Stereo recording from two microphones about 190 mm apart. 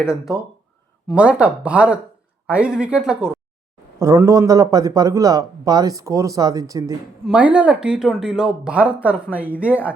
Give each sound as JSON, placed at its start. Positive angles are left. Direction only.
{"t": 1.0, "sound": "speech", "side_deg": -5}
{"t": 4.0, "sound": "speech", "side_deg": -15}
{"t": 7.3, "sound": "speech", "side_deg": -5}